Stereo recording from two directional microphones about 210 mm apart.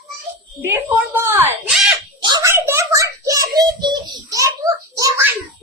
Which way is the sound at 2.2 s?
20° right (ahead or behind).